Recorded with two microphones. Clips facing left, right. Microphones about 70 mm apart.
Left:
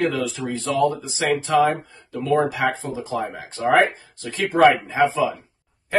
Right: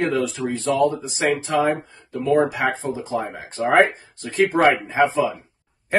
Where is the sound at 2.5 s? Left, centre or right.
Right.